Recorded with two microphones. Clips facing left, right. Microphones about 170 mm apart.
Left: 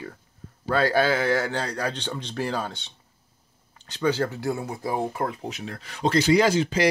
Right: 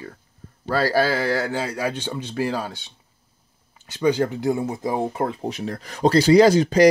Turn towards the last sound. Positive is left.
turn(degrees=-40)  # may be behind; listen again after turning